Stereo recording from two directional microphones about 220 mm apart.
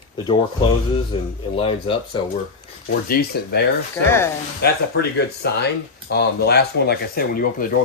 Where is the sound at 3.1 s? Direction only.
45° left (ahead or behind).